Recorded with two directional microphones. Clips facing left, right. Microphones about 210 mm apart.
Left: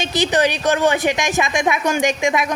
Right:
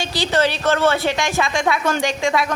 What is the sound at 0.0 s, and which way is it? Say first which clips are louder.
A woman's voice: left 2 dB; 20° left (ahead or behind).